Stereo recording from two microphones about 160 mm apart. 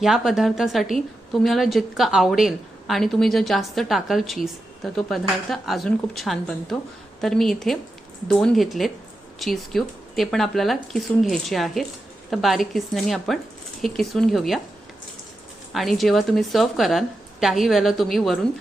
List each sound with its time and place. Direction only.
0.0 s a woman's voice: centre (ahead or behind)
15.7 s a woman's voice: centre (ahead or behind)